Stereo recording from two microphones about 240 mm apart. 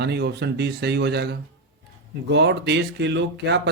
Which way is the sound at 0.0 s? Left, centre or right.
Right.